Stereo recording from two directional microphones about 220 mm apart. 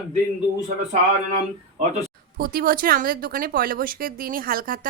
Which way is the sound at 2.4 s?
40° right (ahead or behind).